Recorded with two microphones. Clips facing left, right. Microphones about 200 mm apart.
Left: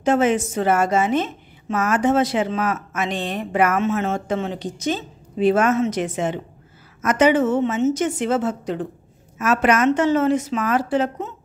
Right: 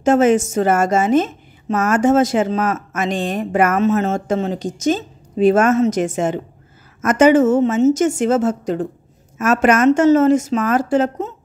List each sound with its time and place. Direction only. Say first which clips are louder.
0.0 s a woman's voice: right 5 dB; 45° right (ahead or behind)